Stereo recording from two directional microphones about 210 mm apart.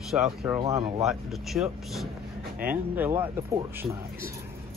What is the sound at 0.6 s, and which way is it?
Speech, 20° right (ahead or behind).